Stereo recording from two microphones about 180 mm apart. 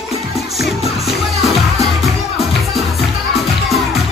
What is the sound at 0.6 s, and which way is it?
Music, centre (ahead or behind).